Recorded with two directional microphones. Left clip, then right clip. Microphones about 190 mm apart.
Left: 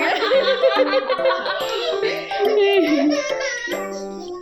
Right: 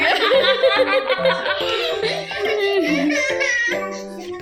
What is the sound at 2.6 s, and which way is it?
Music, 10° left (ahead or behind).